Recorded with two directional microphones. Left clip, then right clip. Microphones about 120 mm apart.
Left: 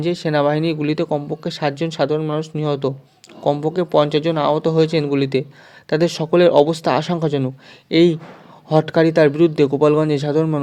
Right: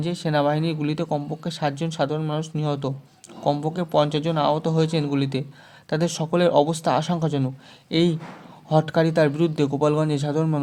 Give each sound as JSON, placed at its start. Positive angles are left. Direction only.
{"t": 0.0, "sound": "speech", "side_deg": 30}